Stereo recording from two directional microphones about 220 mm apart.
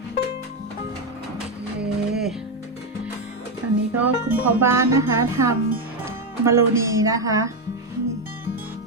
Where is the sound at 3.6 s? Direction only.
90° right.